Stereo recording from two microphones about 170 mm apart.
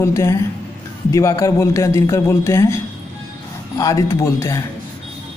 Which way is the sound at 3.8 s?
20° left (ahead or behind).